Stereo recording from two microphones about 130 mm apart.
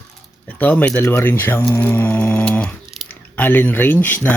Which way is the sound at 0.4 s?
15° left (ahead or behind).